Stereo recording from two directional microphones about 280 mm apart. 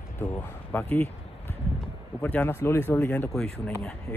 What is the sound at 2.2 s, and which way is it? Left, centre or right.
Speech, centre.